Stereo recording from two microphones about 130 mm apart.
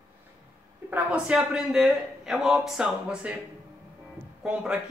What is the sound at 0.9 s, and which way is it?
A man's voice, 10° right (ahead or behind).